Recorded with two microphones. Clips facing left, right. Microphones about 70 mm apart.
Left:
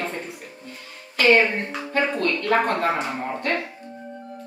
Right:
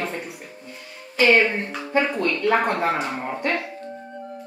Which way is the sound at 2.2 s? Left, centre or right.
Centre.